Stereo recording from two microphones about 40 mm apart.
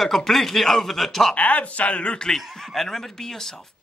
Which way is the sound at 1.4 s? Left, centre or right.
Left.